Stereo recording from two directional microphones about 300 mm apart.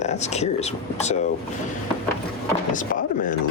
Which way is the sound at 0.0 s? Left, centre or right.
Left.